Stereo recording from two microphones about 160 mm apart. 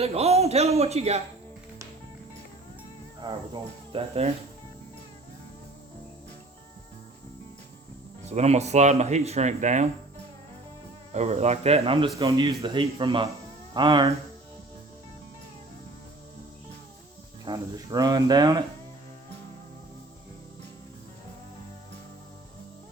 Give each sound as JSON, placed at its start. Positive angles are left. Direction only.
{"t": 0.0, "sound": "a man's voice", "side_deg": -40}
{"t": 3.2, "sound": "speech", "side_deg": -25}
{"t": 8.2, "sound": "speech", "side_deg": -45}
{"t": 11.1, "sound": "a man's voice", "side_deg": -45}
{"t": 17.4, "sound": "speech", "side_deg": -25}